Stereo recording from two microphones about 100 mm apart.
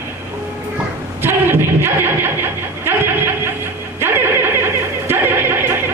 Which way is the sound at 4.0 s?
25° right (ahead or behind).